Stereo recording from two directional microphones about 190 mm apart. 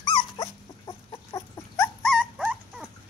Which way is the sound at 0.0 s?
20° left (ahead or behind).